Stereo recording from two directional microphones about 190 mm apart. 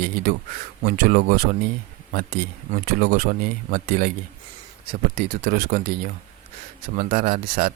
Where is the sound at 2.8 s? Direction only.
45° right (ahead or behind).